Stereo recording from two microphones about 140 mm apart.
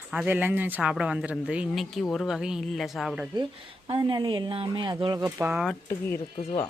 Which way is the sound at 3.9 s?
35° right (ahead or behind).